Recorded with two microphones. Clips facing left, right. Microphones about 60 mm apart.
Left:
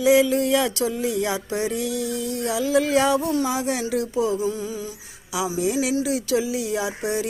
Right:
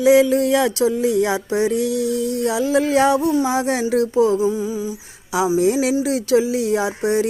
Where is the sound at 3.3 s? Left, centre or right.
Centre.